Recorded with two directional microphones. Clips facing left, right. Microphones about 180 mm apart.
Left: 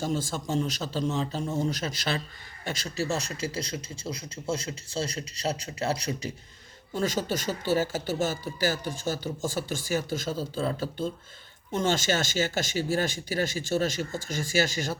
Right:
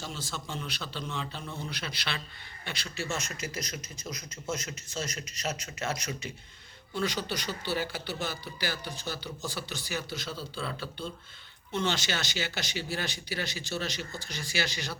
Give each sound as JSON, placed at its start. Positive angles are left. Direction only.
{"t": 0.0, "sound": "speech", "side_deg": 45}